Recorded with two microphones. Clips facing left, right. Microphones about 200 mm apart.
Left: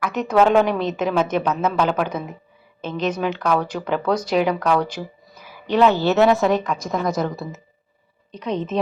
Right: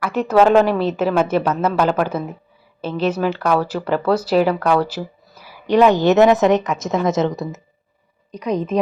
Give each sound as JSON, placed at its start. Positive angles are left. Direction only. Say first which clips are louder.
{"t": 0.0, "sound": "a woman's voice", "louder": "right 3 dB", "side_deg": -5}
{"t": 8.3, "sound": "a woman's voice", "louder": "right 4 dB", "side_deg": -10}